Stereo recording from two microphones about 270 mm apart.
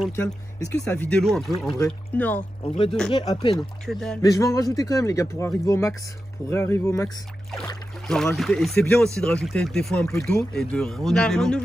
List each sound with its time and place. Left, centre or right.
0.1 s speech: centre
3.1 s speech: centre
3.8 s speech: centre